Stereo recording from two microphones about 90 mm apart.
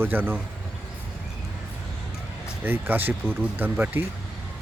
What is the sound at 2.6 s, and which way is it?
Speech, 25° right (ahead or behind).